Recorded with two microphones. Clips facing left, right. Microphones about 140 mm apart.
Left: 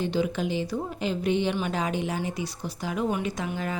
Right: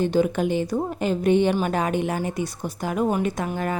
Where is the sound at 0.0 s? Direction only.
50° right (ahead or behind).